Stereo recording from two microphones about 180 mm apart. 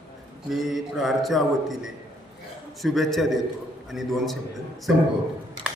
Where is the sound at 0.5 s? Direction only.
Centre (ahead or behind).